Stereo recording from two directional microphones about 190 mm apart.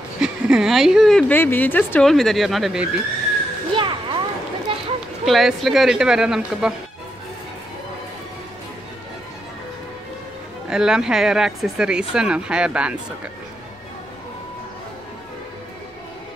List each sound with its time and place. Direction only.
0.2 s a woman's voice: 5° right (ahead or behind)
3.7 s a sound: 25° right (ahead or behind)
4.7 s run: 25° right (ahead or behind)
5.2 s a woman's voice: centre (ahead or behind)
10.7 s a woman's voice: 5° right (ahead or behind)